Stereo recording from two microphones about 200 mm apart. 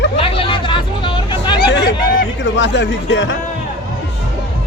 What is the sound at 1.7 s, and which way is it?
Hubbub, 60° left (ahead or behind).